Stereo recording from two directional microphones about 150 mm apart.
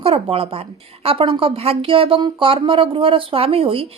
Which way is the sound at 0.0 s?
40° right (ahead or behind).